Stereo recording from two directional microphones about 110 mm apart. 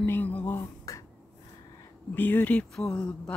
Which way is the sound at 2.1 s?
15° left (ahead or behind).